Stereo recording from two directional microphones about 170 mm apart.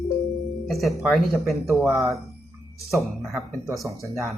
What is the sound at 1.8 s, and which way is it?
Speech, 15° right (ahead or behind).